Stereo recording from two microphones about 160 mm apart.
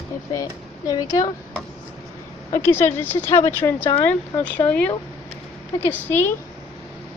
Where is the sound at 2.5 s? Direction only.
15° left (ahead or behind).